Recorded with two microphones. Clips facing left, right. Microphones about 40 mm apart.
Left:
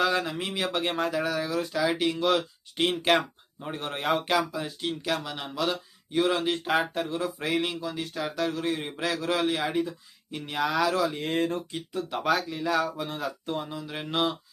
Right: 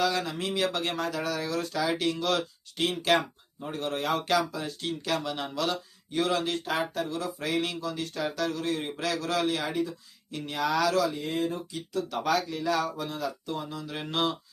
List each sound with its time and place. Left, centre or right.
0.0 s speech: left
2.7 s speech: left
4.3 s speech: centre
6.7 s speech: left; by 8.4 s centre
8.4 s speech: centre
11.1 s speech: left
11.9 s speech: left
12.5 s speech: centre
13.1 s speech: left
13.9 s speech: centre